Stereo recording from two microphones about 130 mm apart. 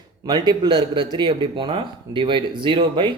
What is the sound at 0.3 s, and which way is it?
A man's voice, 35° right (ahead or behind).